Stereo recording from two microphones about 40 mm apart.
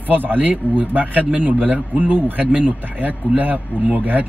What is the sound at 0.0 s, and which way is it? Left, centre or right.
A man's voice, right.